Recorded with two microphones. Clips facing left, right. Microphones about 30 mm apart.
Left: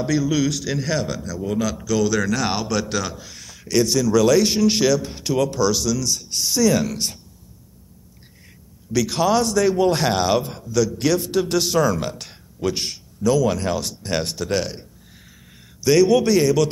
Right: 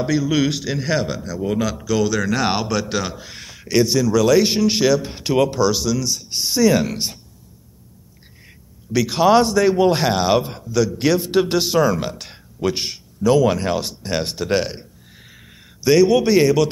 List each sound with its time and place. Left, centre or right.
0.0 s speech: centre
0.4 s speech: right
0.7 s speech: centre
8.9 s speech: centre
11.6 s speech: centre
13.3 s speech: right